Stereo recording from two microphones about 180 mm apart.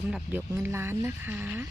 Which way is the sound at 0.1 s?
10° right (ahead or behind).